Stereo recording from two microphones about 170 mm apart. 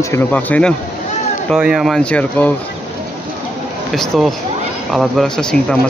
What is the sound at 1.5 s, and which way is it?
Speech, 5° right (ahead or behind).